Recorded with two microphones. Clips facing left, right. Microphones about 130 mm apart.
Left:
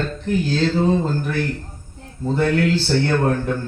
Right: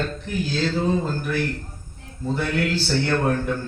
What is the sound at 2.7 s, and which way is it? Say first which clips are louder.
Speech: left 3 dB; 15° left (ahead or behind).